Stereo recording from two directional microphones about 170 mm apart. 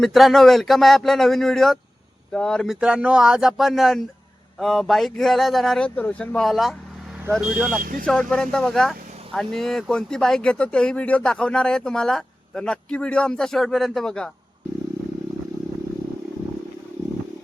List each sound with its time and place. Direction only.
0.0 s speech: centre (ahead or behind)
7.8 s speech: 55° right (ahead or behind)
8.0 s speech: 5° left (ahead or behind)